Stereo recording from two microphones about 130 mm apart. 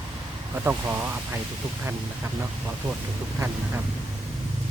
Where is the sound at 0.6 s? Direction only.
15° right (ahead or behind).